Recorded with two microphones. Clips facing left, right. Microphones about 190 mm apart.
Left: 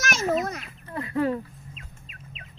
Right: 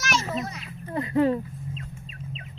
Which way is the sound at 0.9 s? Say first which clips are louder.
Right 4 dB; 20° right (ahead or behind).